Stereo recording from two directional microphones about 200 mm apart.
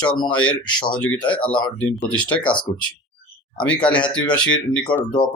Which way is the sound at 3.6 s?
5° left (ahead or behind).